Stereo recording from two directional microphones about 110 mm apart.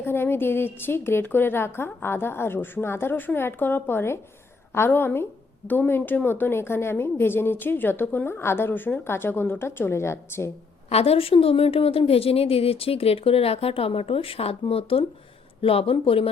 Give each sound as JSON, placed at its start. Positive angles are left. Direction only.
{"t": 0.0, "sound": "a woman's voice", "side_deg": 20}
{"t": 10.8, "sound": "a woman's voice", "side_deg": 70}